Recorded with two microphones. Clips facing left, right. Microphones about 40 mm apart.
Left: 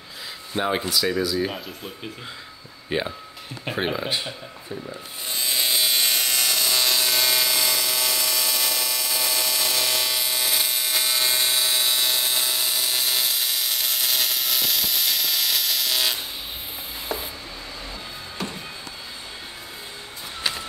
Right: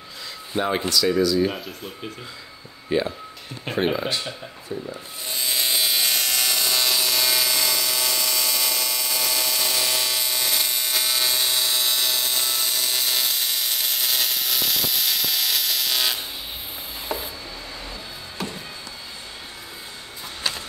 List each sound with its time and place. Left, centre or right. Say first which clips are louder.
0.6 s speech: right 1 dB; centre
2.9 s speech: right 3 dB; left
3.6 s speech: right 3 dB; centre
4.8 s electric shaver: right 1 dB; centre
17.1 s a sound: right 1 dB; centre
18.4 s music: even; centre